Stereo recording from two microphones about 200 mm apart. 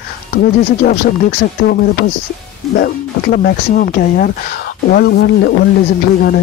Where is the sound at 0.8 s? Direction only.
50° left (ahead or behind).